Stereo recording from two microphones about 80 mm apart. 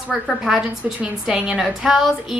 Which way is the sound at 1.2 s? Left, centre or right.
Centre.